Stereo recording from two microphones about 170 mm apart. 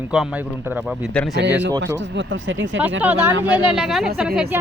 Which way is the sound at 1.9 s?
90° right.